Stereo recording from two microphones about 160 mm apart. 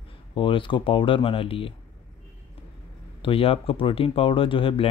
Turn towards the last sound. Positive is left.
turn(degrees=35)  # may be behind; listen again after turning